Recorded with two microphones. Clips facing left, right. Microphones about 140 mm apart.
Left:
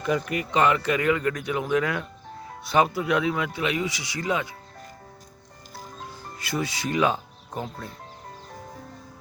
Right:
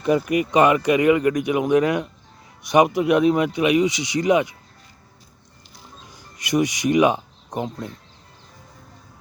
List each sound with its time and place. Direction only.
0.0 s speech: 15° right (ahead or behind)
6.4 s speech: 15° right (ahead or behind)